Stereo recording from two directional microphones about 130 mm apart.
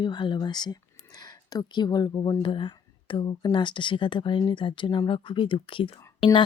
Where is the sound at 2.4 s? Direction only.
40° left (ahead or behind).